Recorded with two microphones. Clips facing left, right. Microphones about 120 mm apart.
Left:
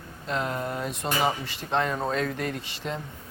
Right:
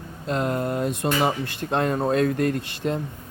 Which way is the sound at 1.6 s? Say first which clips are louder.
Right 4 dB; 45° right (ahead or behind).